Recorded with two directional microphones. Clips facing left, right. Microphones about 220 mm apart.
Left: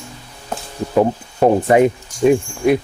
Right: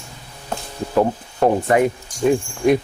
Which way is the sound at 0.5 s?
10° left (ahead or behind).